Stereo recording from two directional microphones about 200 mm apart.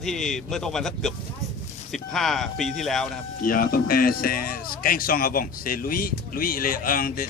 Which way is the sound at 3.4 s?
45° left (ahead or behind).